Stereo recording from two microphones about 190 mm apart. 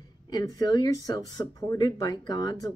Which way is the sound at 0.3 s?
20° left (ahead or behind).